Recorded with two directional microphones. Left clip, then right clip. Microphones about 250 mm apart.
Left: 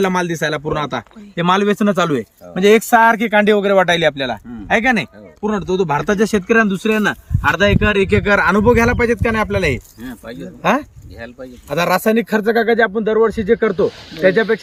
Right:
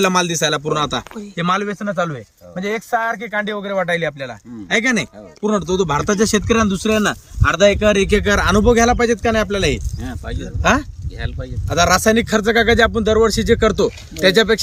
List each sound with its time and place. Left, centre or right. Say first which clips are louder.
0.0 s speech: right 1 dB; centre
1.4 s speech: left 5 dB; left
4.7 s speech: left 2 dB; centre
10.0 s speech: right 1 dB; centre
10.6 s speech: even; centre
12.5 s speech: right 1 dB; centre